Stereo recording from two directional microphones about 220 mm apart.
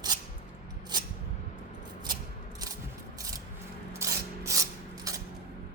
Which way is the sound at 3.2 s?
15° right (ahead or behind).